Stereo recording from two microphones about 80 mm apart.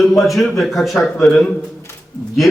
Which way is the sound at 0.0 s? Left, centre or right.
Centre.